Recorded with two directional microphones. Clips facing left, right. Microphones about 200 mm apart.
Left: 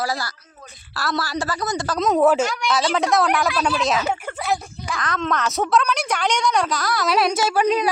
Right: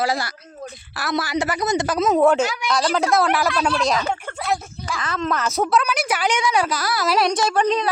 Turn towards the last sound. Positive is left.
turn(degrees=10)  # may be behind; listen again after turning